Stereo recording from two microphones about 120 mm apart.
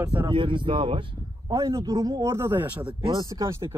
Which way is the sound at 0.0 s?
20° right (ahead or behind).